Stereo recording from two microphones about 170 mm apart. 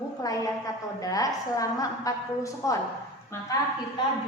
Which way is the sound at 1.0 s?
20° left (ahead or behind).